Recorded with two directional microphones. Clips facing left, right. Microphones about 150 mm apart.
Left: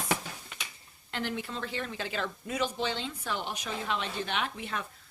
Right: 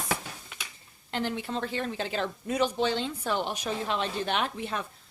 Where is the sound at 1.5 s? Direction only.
40° right (ahead or behind).